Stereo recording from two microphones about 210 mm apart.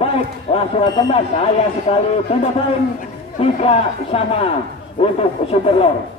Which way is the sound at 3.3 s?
25° left (ahead or behind).